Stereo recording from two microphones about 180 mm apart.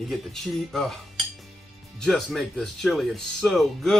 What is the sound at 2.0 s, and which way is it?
Speech, centre (ahead or behind).